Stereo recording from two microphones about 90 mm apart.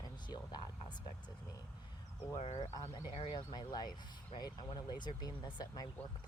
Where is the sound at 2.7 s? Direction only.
55° left (ahead or behind).